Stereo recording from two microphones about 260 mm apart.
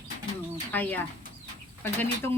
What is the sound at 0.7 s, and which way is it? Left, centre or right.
A woman's voice, centre.